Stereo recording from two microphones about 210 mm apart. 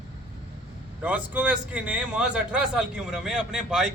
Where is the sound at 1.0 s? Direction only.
5° right (ahead or behind).